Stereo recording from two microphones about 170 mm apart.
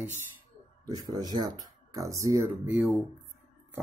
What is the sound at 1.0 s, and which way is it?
Speech, 25° right (ahead or behind).